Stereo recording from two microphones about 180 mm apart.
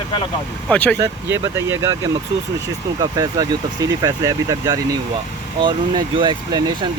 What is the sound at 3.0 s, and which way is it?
Speech, 20° right (ahead or behind).